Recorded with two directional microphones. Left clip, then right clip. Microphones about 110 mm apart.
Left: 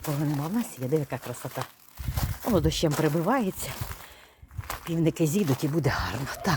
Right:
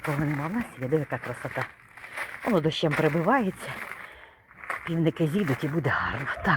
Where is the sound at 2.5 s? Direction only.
25° left (ahead or behind).